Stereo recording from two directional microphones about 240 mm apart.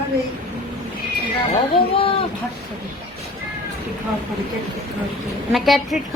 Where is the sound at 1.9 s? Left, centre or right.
Left.